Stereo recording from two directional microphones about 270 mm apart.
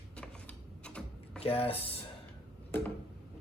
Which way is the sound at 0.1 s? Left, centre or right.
Centre.